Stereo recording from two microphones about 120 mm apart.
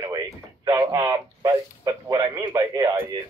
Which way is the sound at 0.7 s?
30° right (ahead or behind).